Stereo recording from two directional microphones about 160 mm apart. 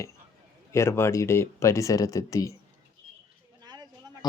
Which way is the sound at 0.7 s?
15° left (ahead or behind).